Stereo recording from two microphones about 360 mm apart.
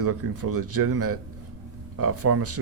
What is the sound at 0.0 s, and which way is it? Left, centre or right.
A man's voice, right.